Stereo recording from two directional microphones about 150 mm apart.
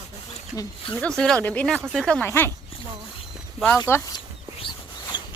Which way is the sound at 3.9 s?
15° left (ahead or behind).